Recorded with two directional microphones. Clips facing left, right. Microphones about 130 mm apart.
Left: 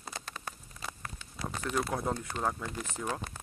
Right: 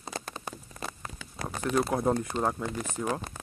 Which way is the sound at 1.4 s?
55° right (ahead or behind).